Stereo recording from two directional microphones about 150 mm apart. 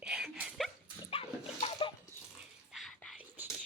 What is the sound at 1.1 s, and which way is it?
Dog, 40° left (ahead or behind).